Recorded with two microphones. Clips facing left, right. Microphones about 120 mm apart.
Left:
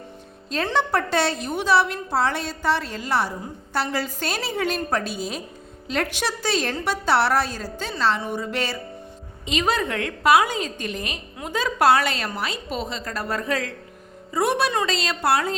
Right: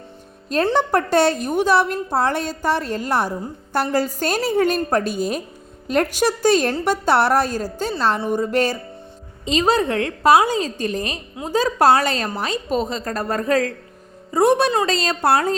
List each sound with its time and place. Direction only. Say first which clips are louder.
0.5 s a woman's voice: right 5 dB; 45° right (ahead or behind)